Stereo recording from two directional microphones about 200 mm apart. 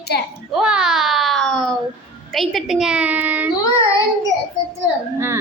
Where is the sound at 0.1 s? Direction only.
55° left (ahead or behind).